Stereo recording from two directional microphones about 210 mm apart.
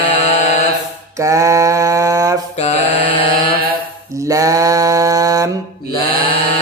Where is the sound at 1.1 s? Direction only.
15° right (ahead or behind).